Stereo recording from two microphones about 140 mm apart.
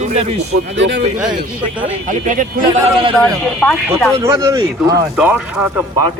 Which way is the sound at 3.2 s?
5° left (ahead or behind).